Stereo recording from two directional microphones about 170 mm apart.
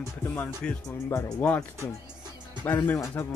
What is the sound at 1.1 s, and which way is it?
Speech, 20° left (ahead or behind).